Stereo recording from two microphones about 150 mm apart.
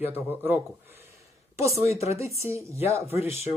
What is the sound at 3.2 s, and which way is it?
Speech, 40° left (ahead or behind).